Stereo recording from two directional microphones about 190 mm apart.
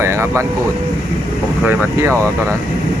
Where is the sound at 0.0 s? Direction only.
15° right (ahead or behind).